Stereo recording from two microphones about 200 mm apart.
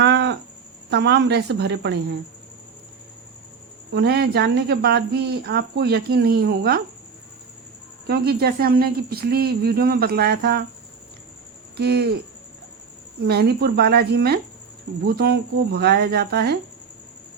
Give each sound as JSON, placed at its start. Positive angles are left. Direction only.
{"t": 0.0, "sound": "a sound", "side_deg": -60}
{"t": 0.9, "sound": "a woman's voice", "side_deg": -60}
{"t": 3.9, "sound": "speech", "side_deg": -55}
{"t": 8.0, "sound": "speech", "side_deg": -50}
{"t": 11.8, "sound": "a woman's voice", "side_deg": -55}
{"t": 13.2, "sound": "speech", "side_deg": -55}